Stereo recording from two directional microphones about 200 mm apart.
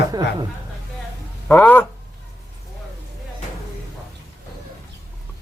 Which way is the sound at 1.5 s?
10° left (ahead or behind).